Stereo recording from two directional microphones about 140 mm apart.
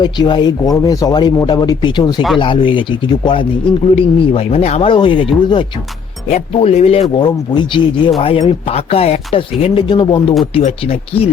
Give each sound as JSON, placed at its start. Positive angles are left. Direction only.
{"t": 0.0, "sound": "speech", "side_deg": 35}
{"t": 3.9, "sound": "speech", "side_deg": 45}
{"t": 6.2, "sound": "speech", "side_deg": 50}
{"t": 7.2, "sound": "speech", "side_deg": 35}
{"t": 8.2, "sound": "speech", "side_deg": 45}